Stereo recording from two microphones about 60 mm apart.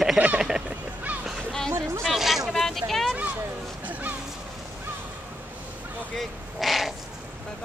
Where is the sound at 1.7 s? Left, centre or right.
Right.